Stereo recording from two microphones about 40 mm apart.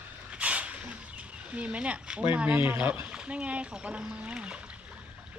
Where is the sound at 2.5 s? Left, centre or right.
Right.